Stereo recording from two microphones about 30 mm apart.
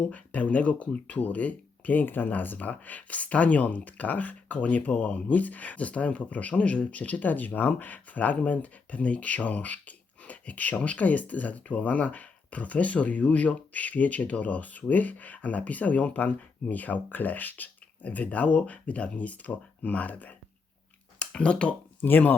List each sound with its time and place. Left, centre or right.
0.1 s speech: left
6.6 s speech: left
18.0 s speech: left
18.6 s speech: left
21.3 s speech: left
22.1 s speech: left